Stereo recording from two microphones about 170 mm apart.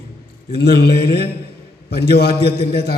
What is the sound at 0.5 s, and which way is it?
A man's voice, 70° left (ahead or behind).